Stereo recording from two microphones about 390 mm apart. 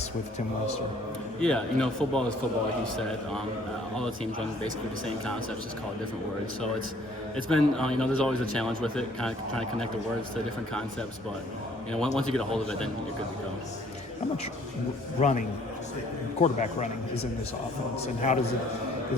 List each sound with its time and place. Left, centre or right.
1.4 s a man's voice: centre
3.9 s a man's voice: centre
7.5 s a man's voice: centre
12.1 s a man's voice: centre
15.2 s a man's voice: centre
16.4 s a man's voice: centre
18.0 s a man's voice: centre